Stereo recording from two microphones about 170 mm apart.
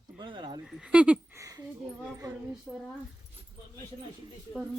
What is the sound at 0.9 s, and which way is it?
Speech, 5° right (ahead or behind).